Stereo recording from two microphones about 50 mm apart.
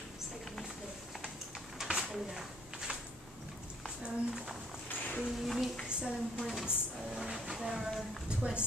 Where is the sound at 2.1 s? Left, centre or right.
Centre.